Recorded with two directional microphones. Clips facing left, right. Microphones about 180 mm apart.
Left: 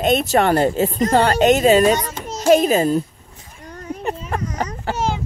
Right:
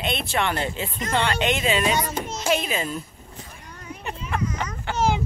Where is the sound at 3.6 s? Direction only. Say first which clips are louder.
Left 10 dB; 40° left (ahead or behind).